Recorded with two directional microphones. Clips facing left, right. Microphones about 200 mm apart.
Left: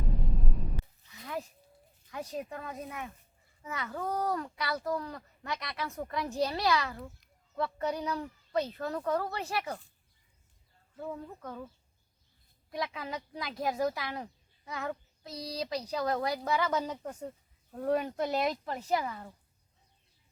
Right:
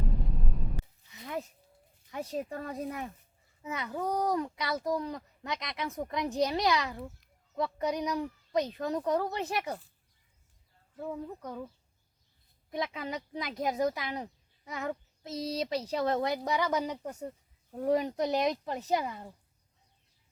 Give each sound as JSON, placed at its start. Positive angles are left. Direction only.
{"t": 0.0, "sound": "a sound", "side_deg": 0}
{"t": 1.1, "sound": "a sound", "side_deg": -20}
{"t": 2.0, "sound": "speech", "side_deg": -25}
{"t": 3.6, "sound": "speech", "side_deg": -20}
{"t": 11.0, "sound": "speech", "side_deg": -10}
{"t": 12.7, "sound": "speech", "side_deg": -20}